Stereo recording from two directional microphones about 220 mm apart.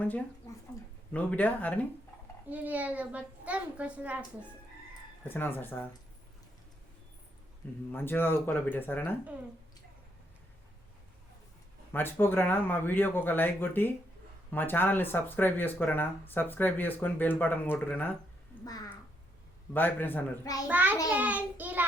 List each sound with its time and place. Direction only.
1.1 s speech: 5° left (ahead or behind)
2.5 s a child's voice: 5° right (ahead or behind)
5.3 s speech: 10° left (ahead or behind)
7.9 s speech: 10° left (ahead or behind)
11.9 s speech: 10° left (ahead or behind)
20.7 s a child's voice: 10° right (ahead or behind)